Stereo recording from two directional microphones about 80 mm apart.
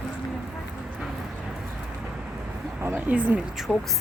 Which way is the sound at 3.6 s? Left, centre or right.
Centre.